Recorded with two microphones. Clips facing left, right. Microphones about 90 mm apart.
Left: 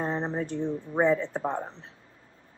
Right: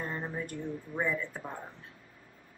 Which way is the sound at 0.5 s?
25° left (ahead or behind).